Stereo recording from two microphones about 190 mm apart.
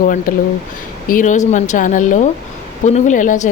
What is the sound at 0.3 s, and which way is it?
Speech, 45° left (ahead or behind).